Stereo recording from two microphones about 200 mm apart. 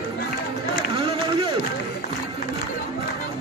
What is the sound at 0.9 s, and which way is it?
Run, 25° right (ahead or behind).